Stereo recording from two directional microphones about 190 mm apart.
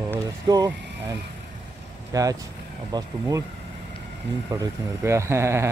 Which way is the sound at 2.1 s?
15° right (ahead or behind).